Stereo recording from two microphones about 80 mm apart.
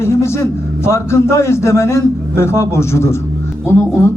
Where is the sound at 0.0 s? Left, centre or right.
Left.